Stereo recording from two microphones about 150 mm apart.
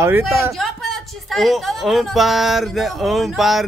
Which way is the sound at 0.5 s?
Centre (ahead or behind).